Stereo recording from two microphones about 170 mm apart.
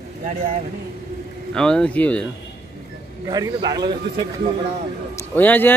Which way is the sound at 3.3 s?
25° right (ahead or behind).